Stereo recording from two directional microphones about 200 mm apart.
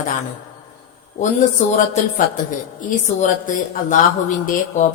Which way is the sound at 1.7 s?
40° left (ahead or behind).